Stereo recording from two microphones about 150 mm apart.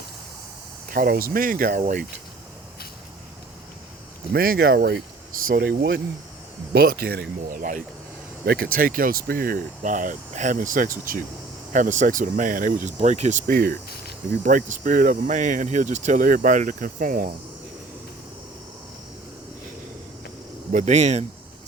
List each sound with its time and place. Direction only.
0.9 s speech: 75° right (ahead or behind)
4.3 s speech: 90° right
5.5 s speech: 65° right (ahead or behind)
8.4 s speech: 85° right; by 17.3 s 65° right (ahead or behind)
20.7 s speech: 50° right (ahead or behind)